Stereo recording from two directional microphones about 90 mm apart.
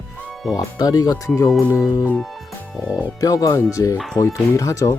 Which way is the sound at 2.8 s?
45° left (ahead or behind).